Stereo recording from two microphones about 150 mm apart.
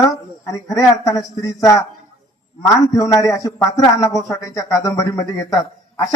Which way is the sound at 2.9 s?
25° left (ahead or behind).